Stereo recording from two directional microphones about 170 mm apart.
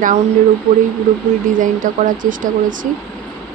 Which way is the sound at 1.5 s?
50° right (ahead or behind).